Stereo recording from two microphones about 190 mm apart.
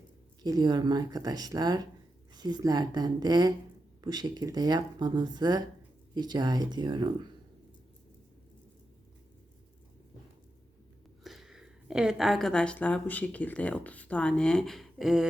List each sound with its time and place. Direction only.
0.4 s speech: 20° right (ahead or behind)
11.2 s a woman's voice: centre (ahead or behind)